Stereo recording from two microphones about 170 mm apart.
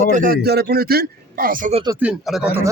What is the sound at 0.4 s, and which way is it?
A man's voice, 70° right (ahead or behind).